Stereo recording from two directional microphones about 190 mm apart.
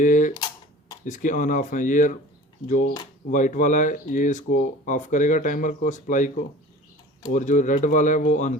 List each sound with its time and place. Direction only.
0.0 s speech: 45° left (ahead or behind)
3.3 s speech: 40° left (ahead or behind)